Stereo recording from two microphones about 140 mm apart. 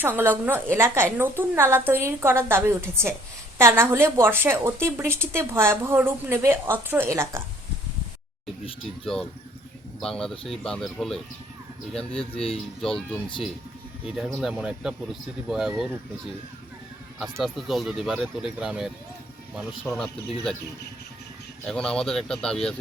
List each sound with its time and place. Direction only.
0.0 s a woman's voice: 15° right (ahead or behind)
10.0 s speech: 5° left (ahead or behind)
12.8 s a woman's voice: 5° left (ahead or behind)
17.3 s speech: centre (ahead or behind)
21.7 s speech: 5° left (ahead or behind)